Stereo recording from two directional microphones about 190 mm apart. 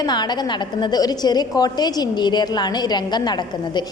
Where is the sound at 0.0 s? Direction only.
20° left (ahead or behind).